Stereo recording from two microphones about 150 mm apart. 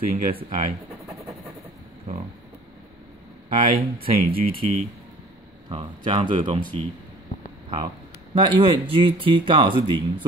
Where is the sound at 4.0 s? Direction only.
75° right (ahead or behind).